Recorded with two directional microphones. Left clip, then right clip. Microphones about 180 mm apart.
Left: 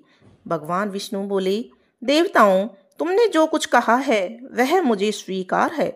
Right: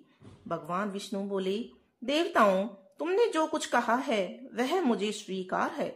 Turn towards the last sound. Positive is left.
turn(degrees=40)  # may be behind; listen again after turning